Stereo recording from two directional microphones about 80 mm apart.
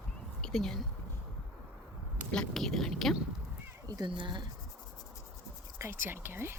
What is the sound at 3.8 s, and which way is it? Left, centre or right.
Speech, right.